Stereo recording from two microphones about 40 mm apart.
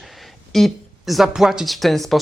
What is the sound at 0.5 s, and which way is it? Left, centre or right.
Speech, centre.